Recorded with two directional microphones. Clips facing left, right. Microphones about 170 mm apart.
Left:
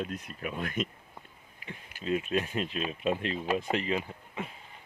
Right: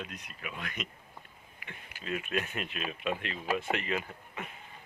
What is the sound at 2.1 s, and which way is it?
Speech, 30° left (ahead or behind).